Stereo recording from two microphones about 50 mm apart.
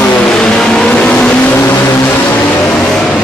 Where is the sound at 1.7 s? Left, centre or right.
Left.